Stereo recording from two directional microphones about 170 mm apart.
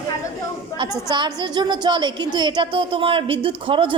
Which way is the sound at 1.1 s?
25° right (ahead or behind).